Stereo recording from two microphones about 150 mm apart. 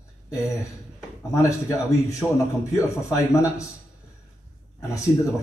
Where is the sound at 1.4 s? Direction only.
20° left (ahead or behind).